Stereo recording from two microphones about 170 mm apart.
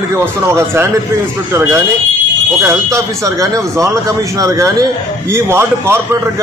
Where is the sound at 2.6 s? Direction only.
15° right (ahead or behind).